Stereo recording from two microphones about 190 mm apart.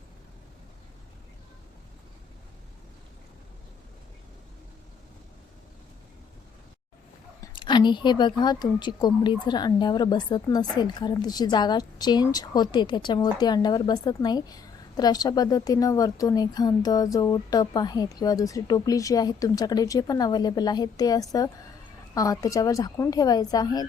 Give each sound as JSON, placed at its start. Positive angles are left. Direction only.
{"t": 7.4, "sound": "a woman's voice", "side_deg": 25}